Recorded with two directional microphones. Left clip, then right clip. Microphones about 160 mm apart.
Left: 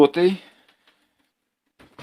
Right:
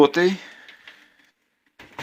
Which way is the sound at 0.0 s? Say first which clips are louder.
Even; 15° left (ahead or behind).